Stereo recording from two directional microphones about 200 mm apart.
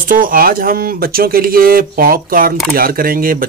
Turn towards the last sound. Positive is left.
turn(degrees=-45)  # may be behind; listen again after turning